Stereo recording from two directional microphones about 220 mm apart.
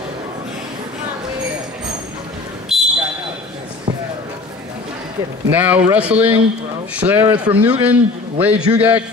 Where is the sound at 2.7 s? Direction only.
Centre (ahead or behind).